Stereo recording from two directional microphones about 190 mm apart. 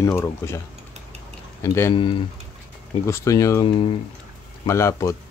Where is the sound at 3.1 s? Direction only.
15° left (ahead or behind).